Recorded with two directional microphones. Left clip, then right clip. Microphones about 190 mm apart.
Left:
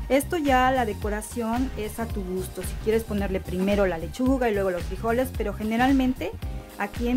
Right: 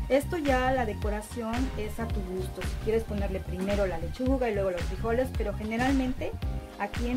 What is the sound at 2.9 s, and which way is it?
Speech, 45° left (ahead or behind).